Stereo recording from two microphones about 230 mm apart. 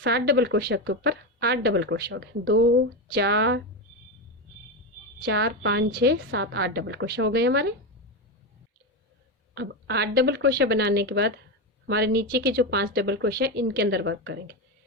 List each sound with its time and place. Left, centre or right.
0.0 s speech: right
5.2 s speech: right
9.6 s speech: right